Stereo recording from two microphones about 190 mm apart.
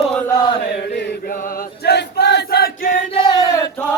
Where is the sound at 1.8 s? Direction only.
60° left (ahead or behind).